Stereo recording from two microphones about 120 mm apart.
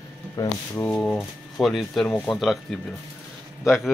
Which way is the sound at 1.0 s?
Centre (ahead or behind).